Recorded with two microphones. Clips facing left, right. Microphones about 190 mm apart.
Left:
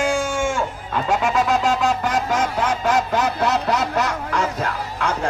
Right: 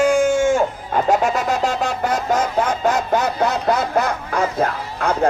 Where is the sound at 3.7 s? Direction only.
80° left.